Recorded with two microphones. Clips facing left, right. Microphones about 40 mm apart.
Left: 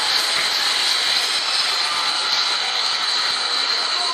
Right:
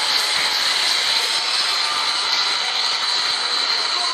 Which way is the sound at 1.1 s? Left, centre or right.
Right.